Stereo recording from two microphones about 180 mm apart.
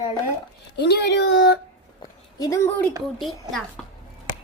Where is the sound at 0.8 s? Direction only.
70° left (ahead or behind).